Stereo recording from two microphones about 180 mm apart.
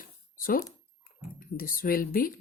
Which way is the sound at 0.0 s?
50° left (ahead or behind).